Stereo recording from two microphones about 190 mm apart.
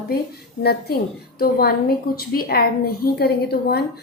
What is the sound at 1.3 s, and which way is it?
A woman's voice, 55° left (ahead or behind).